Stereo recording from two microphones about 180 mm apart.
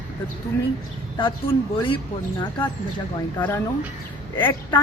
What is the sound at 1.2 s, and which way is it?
Speech, 30° left (ahead or behind).